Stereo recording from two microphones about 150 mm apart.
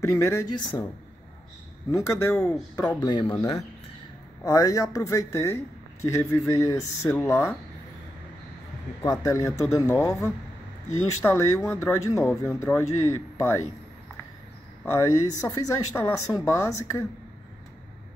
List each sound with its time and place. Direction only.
0.0 s speech: 20° left (ahead or behind)
1.9 s speech: 20° left (ahead or behind)
2.3 s speech: 5° left (ahead or behind)
3.0 s speech: 30° left (ahead or behind)
4.5 s speech: 25° left (ahead or behind)
9.0 s speech: 20° left (ahead or behind)
14.9 s speech: 20° left (ahead or behind)